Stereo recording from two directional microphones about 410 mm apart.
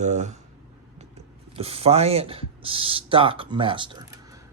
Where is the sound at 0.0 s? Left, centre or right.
Centre.